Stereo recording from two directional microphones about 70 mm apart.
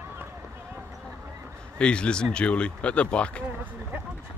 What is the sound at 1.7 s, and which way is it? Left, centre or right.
Speech, centre.